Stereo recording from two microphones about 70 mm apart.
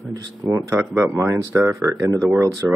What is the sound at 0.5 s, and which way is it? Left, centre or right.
Speech, right.